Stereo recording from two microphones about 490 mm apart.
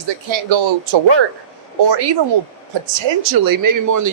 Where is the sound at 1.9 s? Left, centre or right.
Right.